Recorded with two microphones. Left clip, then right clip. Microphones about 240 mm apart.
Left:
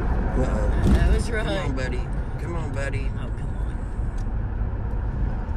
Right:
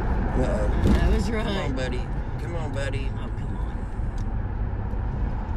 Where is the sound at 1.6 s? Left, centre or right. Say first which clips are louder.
Even; right.